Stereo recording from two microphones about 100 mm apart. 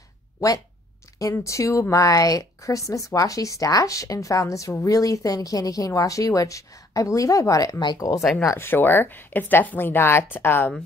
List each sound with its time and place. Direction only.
1.3 s speech: 30° left (ahead or behind)
8.4 s speech: 25° left (ahead or behind)